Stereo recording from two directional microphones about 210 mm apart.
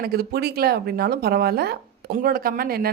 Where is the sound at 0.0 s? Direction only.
45° right (ahead or behind).